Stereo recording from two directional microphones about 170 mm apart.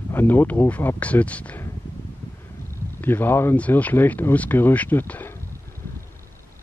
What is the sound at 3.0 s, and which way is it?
Speech, 10° left (ahead or behind).